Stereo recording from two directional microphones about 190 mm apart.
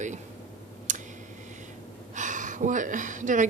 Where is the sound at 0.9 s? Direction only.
40° right (ahead or behind).